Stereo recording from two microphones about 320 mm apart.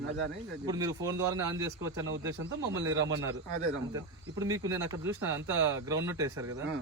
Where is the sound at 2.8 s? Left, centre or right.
Right.